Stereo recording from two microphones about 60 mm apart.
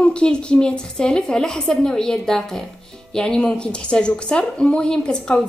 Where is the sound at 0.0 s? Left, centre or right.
Centre.